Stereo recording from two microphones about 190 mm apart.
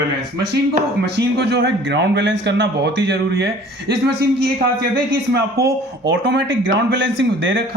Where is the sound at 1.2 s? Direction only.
65° right (ahead or behind).